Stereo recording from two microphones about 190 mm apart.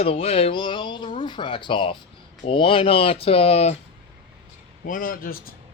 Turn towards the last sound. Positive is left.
turn(degrees=50)  # may be behind; listen again after turning